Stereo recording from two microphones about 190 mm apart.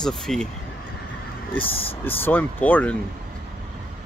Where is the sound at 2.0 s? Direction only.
10° left (ahead or behind).